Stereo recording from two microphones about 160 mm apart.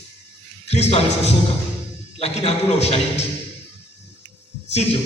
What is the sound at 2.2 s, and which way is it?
A man's voice, 40° left (ahead or behind).